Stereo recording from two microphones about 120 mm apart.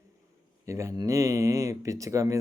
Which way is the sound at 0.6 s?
25° right (ahead or behind).